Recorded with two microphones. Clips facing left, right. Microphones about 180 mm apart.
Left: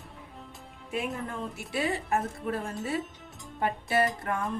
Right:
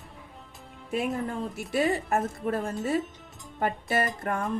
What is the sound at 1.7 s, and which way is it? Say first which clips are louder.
A woman's voice: right 4 dB; 45° right (ahead or behind).